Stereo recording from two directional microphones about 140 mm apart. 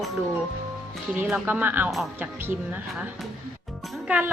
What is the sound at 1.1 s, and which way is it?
A woman's voice, 5° right (ahead or behind).